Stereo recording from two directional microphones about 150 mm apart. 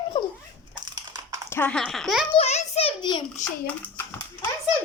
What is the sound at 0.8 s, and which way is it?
Biting, 30° right (ahead or behind).